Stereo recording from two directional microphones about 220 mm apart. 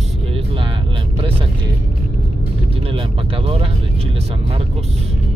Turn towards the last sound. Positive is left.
turn(degrees=-25)  # may be behind; listen again after turning